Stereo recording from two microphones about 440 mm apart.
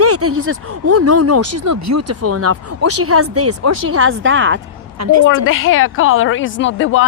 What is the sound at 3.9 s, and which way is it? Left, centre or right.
A woman's voice, right.